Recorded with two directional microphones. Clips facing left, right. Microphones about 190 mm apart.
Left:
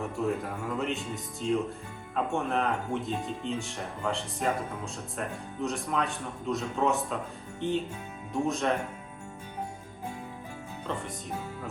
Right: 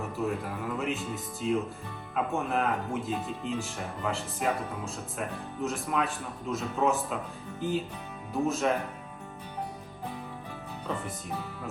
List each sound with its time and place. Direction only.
0.0 s speech: centre (ahead or behind)
5.6 s speech: centre (ahead or behind)